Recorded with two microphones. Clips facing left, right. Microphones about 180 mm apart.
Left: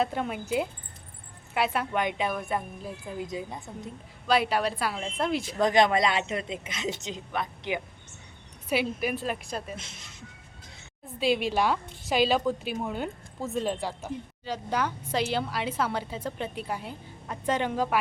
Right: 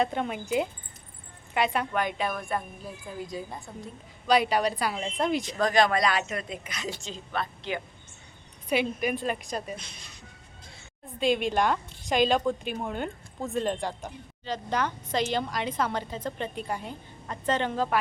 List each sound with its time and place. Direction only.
0.0 s speech: 5° left (ahead or behind)
1.9 s a woman's voice: 20° left (ahead or behind)
4.3 s speech: centre (ahead or behind)
5.5 s a woman's voice: 20° left (ahead or behind)
8.7 s speech: 5° left (ahead or behind)
9.7 s a woman's voice: 25° left (ahead or behind)
11.0 s a woman's voice: 5° left (ahead or behind)